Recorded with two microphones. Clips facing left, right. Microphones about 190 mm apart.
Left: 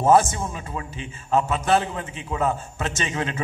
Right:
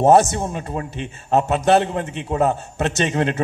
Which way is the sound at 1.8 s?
70° right (ahead or behind).